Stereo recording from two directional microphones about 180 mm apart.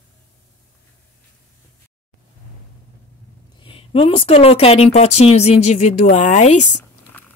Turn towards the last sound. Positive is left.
turn(degrees=40)  # may be behind; listen again after turning